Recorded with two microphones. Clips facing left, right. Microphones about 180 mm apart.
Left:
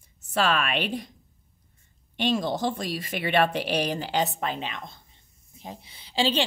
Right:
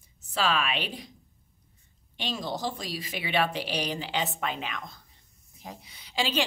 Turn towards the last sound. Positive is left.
turn(degrees=30)  # may be behind; listen again after turning